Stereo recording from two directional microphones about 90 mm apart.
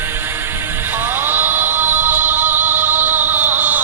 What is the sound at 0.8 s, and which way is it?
Music, 25° right (ahead or behind).